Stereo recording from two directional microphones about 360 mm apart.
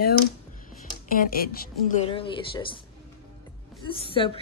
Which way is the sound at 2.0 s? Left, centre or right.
Centre.